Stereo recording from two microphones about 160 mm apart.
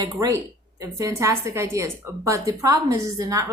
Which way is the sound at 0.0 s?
20° right (ahead or behind).